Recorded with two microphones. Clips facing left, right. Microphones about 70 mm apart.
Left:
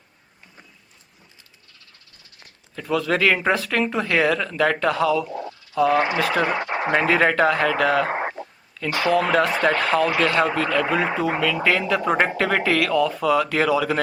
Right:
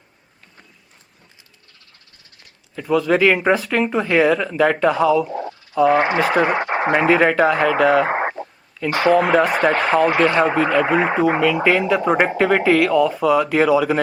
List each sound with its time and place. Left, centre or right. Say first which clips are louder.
2.7 s speech: right 5 dB; centre
5.3 s a sound: right 4 dB; right
5.7 s speech: right 4 dB; centre
6.0 s speech: right 4 dB; right
6.2 s speech: right 4 dB; centre
6.5 s speech: right 5 dB; right
6.9 s speech: right 3 dB; centre
8.1 s a sound: right 5 dB; right
8.9 s speech: right 5 dB; right
11.3 s speech: right 5 dB; centre